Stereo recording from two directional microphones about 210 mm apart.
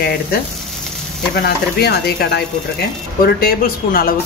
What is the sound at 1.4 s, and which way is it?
Speech, 50° left (ahead or behind).